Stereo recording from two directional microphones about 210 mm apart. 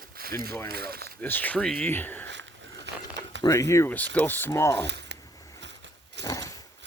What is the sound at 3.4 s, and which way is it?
Speech, 15° left (ahead or behind).